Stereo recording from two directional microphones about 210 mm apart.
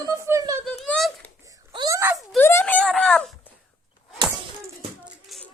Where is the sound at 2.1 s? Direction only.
Centre (ahead or behind).